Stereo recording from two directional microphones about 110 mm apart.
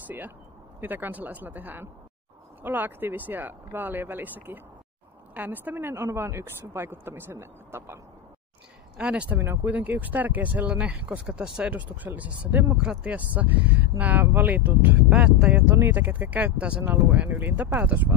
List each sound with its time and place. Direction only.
0.7 s a woman's voice: 15° right (ahead or behind)
8.9 s speech: 10° right (ahead or behind)